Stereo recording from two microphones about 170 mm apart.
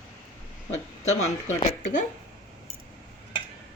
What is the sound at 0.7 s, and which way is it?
Speech, 40° left (ahead or behind).